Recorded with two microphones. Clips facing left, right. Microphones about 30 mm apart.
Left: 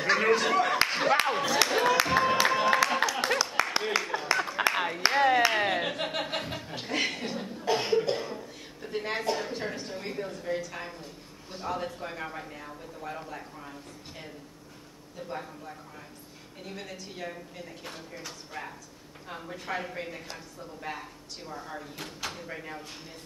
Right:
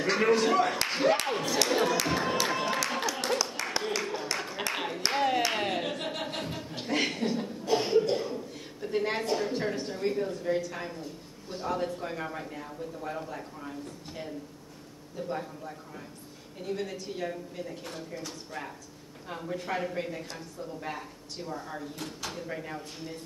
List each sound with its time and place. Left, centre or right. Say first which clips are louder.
0.0 s speech: even; centre
2.1 s music: left 4 dB; centre
3.2 s clapping: left 2 dB; centre
3.4 s a sound: left 4 dB; centre
8.9 s speech: right 1 dB; centre